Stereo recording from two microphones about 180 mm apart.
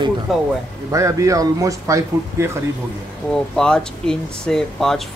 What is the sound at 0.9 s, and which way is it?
Speech, 15° right (ahead or behind).